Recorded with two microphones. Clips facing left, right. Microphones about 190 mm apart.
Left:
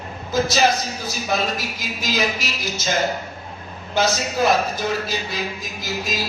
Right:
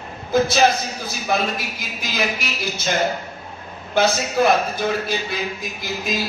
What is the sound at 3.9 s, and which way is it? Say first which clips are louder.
A man's voice: right 3 dB; 55° right (ahead or behind).